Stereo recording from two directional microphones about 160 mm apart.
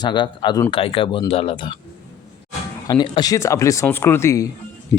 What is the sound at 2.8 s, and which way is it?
Speech, 30° left (ahead or behind).